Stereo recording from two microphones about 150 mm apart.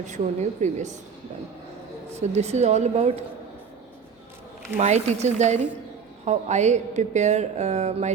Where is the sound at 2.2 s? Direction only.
45° right (ahead or behind).